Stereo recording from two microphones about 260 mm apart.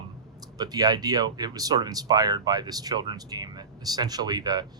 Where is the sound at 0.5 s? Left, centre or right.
Centre.